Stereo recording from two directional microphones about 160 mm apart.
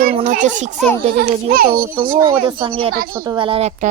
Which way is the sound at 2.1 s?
30° right (ahead or behind).